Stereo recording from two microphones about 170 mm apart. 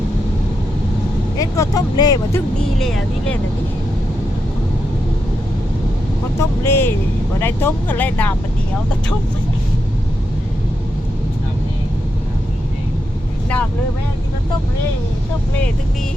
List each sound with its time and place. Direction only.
1.4 s speech: 20° left (ahead or behind)
2.6 s speech: centre (ahead or behind)
6.4 s speech: 15° left (ahead or behind)